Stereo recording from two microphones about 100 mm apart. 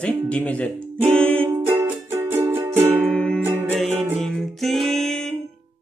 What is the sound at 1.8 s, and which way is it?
Music, 25° right (ahead or behind).